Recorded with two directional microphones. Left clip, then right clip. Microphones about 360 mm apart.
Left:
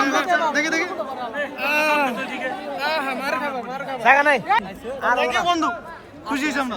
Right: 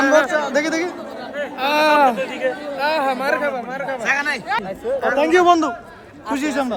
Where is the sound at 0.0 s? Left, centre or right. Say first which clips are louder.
Right 6 dB; right.